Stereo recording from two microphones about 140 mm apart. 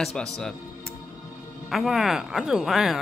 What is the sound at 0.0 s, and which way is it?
Speech, 5° left (ahead or behind).